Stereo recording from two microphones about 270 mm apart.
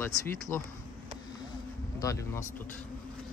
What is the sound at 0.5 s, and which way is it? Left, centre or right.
Speech, centre.